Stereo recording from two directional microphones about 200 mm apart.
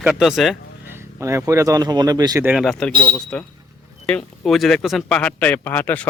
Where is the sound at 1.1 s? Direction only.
15° right (ahead or behind).